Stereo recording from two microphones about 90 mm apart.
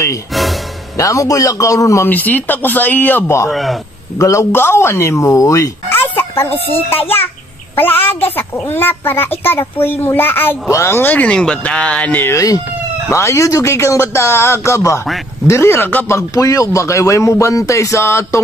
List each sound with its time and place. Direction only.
0.3 s music: centre (ahead or behind)
0.9 s speech: 40° left (ahead or behind)
2.0 s a child's voice: 20° left (ahead or behind)
3.4 s a man's voice: centre (ahead or behind)
4.2 s speech: 35° left (ahead or behind)
5.9 s a sound: 25° left (ahead or behind)
6.9 s a child's voice: 25° left (ahead or behind)
12.3 s speech: 40° left (ahead or behind)